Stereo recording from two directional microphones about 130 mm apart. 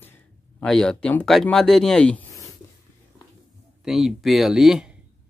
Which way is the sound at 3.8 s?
Centre (ahead or behind).